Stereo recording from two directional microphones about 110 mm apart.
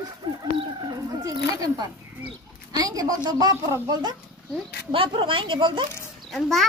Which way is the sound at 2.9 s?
35° right (ahead or behind).